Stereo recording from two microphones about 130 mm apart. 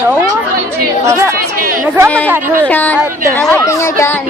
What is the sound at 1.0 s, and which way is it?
Speech, 20° right (ahead or behind).